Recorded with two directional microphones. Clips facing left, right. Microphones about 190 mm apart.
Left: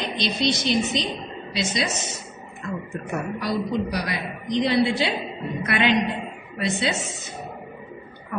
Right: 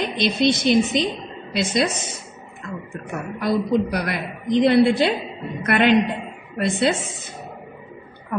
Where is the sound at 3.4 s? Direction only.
55° right (ahead or behind).